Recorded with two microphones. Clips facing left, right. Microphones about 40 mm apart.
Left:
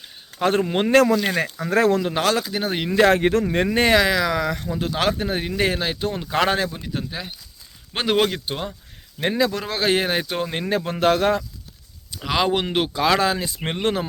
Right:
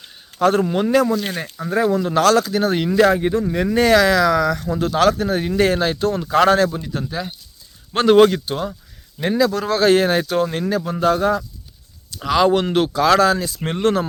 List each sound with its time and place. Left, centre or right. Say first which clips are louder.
0.3 s speech: right 4 dB; left
0.7 s speech: even; left
1.0 s speech: left 2 dB; left
2.0 s speech: right 6 dB; centre
3.2 s speech: even; left
3.4 s speech: right 1 dB; left
3.7 s speech: right 4 dB; left
4.0 s speech: right 5 dB; centre
5.5 s speech: right 6 dB; centre
9.3 s speech: right 4 dB; left
9.6 s speech: right 6 dB; centre
10.7 s speech: left 3 dB; left
12.1 s speech: right 5 dB; centre